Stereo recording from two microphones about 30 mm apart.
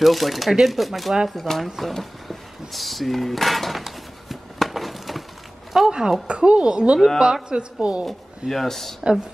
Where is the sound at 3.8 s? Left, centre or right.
Centre.